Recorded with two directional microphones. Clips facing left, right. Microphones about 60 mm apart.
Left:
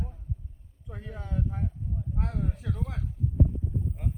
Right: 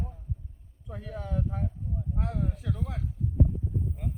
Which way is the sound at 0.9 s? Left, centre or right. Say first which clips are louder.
Right 3 dB; centre.